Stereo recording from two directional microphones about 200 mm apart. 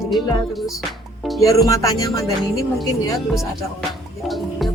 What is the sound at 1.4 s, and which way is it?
Music, 15° left (ahead or behind).